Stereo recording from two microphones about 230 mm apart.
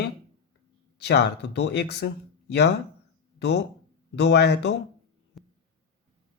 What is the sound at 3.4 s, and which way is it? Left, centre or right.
Speech, left.